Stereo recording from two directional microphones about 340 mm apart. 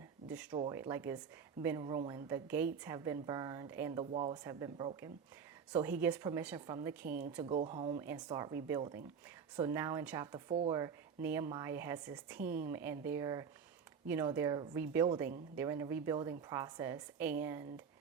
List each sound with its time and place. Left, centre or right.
0.3 s speech: centre